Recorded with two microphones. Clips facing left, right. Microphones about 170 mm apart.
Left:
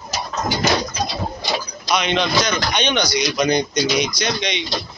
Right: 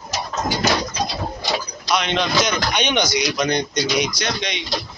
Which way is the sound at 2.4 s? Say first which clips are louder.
Even; 10° right (ahead or behind).